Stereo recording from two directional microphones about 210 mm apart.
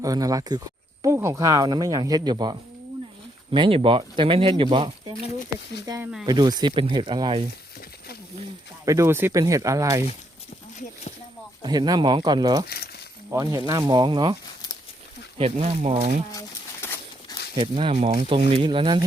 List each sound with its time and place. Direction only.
0.0 s speech: 15° right (ahead or behind)
6.2 s speech: 20° right (ahead or behind)
8.8 s speech: 15° right (ahead or behind)
11.6 s speech: 20° right (ahead or behind)
12.6 s speech: 50° left (ahead or behind)
13.3 s speech: 15° right (ahead or behind)
15.4 s speech: 25° right (ahead or behind)
16.3 s a sound: 15° left (ahead or behind)
17.6 s speech: 25° right (ahead or behind)